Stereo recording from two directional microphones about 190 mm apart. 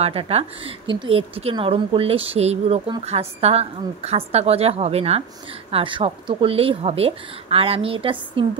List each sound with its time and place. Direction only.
0.0 s speech: 30° right (ahead or behind)